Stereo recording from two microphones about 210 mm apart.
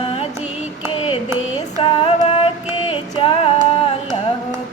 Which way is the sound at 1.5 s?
25° left (ahead or behind).